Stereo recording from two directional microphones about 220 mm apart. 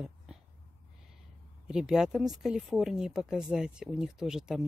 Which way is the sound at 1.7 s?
5° right (ahead or behind).